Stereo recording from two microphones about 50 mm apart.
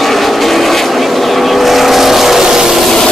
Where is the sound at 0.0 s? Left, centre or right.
Centre.